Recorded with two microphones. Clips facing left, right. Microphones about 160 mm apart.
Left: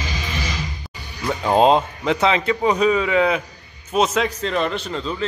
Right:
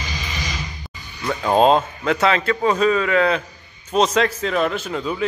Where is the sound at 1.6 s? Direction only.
15° left (ahead or behind).